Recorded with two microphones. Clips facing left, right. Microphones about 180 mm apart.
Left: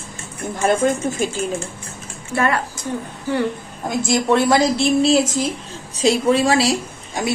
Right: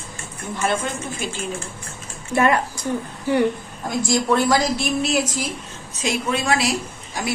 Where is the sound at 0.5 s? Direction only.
45° left (ahead or behind).